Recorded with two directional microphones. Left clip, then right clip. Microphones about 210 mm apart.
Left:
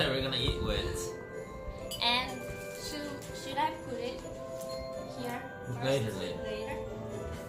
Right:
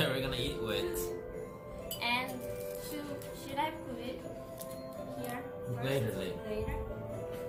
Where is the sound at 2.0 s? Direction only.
20° left (ahead or behind).